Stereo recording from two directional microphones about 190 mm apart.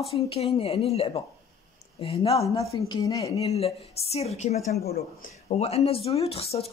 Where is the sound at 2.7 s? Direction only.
20° left (ahead or behind).